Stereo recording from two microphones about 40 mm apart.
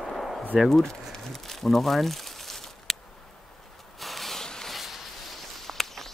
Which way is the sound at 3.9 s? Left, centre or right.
Centre.